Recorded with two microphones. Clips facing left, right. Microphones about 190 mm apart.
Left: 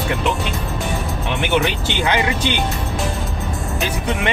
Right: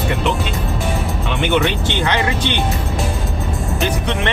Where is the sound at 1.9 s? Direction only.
15° left (ahead or behind).